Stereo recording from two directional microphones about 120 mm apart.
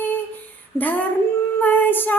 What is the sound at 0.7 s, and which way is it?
Child singing, 15° left (ahead or behind).